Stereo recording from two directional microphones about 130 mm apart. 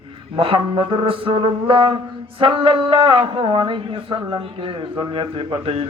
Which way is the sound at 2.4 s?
45° right (ahead or behind).